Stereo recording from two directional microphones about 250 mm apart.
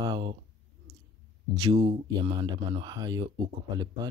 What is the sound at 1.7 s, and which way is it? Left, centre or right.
Speech, right.